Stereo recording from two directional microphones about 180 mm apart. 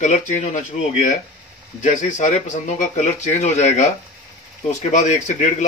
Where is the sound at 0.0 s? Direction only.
40° left (ahead or behind).